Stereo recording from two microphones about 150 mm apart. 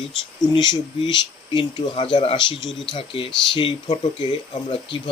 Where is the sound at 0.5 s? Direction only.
30° left (ahead or behind).